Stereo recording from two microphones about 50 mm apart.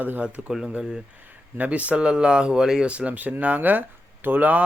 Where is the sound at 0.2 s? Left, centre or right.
Right.